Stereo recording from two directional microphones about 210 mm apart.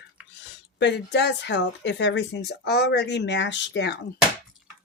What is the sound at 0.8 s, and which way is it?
Speech, 55° left (ahead or behind).